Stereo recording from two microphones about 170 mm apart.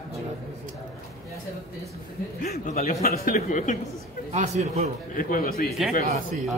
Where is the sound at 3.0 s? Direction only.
60° left (ahead or behind).